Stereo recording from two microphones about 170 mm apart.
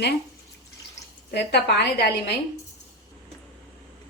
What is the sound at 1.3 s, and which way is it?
Speech, 75° left (ahead or behind).